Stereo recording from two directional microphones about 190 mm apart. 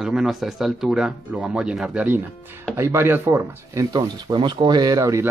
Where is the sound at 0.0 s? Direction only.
5° right (ahead or behind).